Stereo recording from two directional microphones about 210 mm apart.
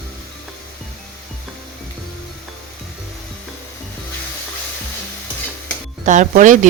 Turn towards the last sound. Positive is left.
turn(degrees=-35)  # may be behind; listen again after turning